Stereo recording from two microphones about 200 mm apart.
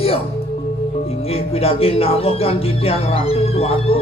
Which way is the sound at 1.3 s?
30° left (ahead or behind).